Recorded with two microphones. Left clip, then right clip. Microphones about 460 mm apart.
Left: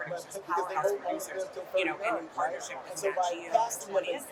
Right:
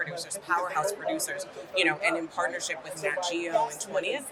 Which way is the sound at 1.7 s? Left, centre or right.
Right.